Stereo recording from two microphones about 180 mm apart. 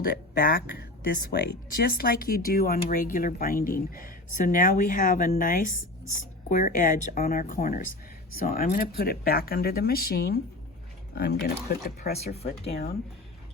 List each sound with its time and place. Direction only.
0.0 s speech: 55° left (ahead or behind)
12.1 s speech: 35° left (ahead or behind)